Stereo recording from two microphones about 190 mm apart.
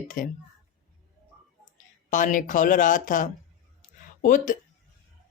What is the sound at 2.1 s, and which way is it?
Speech, 40° left (ahead or behind).